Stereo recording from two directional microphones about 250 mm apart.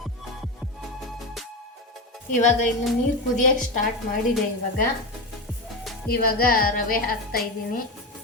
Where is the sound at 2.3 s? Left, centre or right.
Left.